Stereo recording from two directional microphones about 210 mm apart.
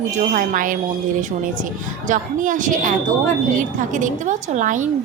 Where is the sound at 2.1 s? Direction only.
40° right (ahead or behind).